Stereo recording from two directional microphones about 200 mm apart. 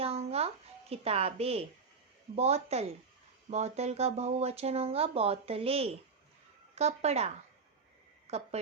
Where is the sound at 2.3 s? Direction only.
30° right (ahead or behind).